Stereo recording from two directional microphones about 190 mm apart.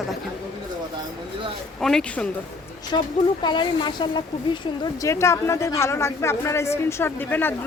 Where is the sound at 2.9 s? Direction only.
20° left (ahead or behind).